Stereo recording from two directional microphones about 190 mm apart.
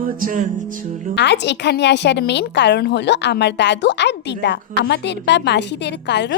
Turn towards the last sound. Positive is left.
turn(degrees=65)  # may be behind; listen again after turning